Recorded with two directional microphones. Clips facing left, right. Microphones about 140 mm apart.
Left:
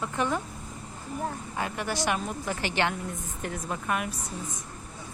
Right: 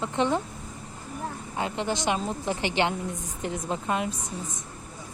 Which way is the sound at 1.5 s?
20° right (ahead or behind).